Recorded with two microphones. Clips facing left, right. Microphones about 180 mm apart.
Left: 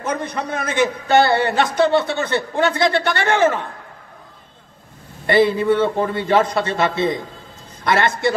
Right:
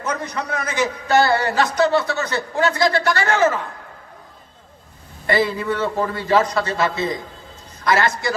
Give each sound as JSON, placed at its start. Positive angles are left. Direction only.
{"t": 0.0, "sound": "a man's voice", "side_deg": 25}
{"t": 5.2, "sound": "a woman's voice", "side_deg": 25}